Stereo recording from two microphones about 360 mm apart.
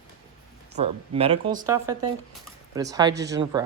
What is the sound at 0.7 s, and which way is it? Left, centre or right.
Speech, centre.